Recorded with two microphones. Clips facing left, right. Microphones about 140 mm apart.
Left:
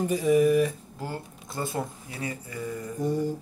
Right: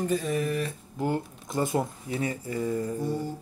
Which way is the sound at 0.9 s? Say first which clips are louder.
Right 7 dB; 20° right (ahead or behind).